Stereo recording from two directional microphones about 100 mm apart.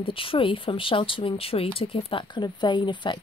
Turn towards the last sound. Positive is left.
turn(degrees=50)  # may be behind; listen again after turning